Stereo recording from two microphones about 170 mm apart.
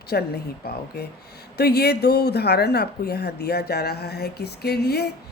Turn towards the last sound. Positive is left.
turn(degrees=75)  # may be behind; listen again after turning